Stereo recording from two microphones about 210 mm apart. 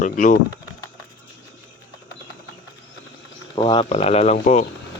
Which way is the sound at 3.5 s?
20° left (ahead or behind).